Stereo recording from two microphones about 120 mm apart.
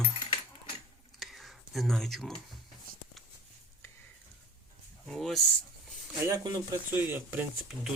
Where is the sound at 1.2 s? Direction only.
Centre (ahead or behind).